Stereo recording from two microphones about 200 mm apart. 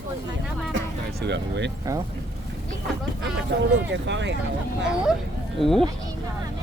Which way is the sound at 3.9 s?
65° right (ahead or behind).